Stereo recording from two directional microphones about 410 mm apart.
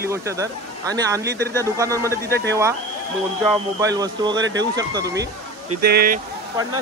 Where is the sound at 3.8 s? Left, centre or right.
Centre.